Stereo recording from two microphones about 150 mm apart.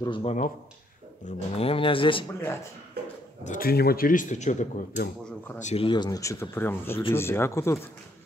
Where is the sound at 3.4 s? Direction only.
70° left (ahead or behind); by 5.8 s 50° left (ahead or behind).